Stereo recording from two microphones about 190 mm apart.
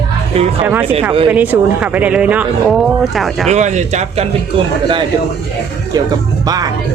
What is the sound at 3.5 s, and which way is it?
Speech, 40° right (ahead or behind).